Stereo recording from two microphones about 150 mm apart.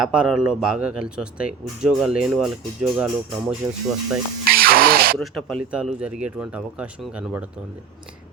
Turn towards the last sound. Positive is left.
turn(degrees=-10)  # may be behind; listen again after turning